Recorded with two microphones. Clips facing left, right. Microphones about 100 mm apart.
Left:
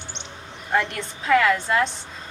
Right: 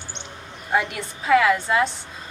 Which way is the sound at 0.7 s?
5° right (ahead or behind).